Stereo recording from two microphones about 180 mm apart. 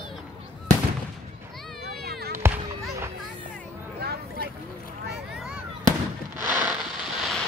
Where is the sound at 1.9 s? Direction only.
60° right (ahead or behind).